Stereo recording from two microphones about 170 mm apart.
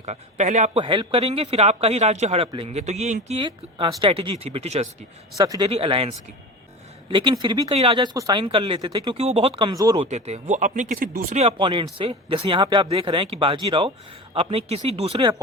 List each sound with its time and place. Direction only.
0.0 s speech: 40° right (ahead or behind)
0.8 s a man's voice: 30° right (ahead or behind)
5.4 s speech: 25° right (ahead or behind)
5.7 s a man's voice: 35° right (ahead or behind)
7.7 s speech: 35° right (ahead or behind)
10.1 s speech: 40° right (ahead or behind)
11.3 s a man's voice: 35° right (ahead or behind)